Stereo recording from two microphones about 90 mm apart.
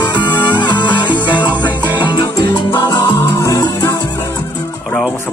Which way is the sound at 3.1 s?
30° left (ahead or behind).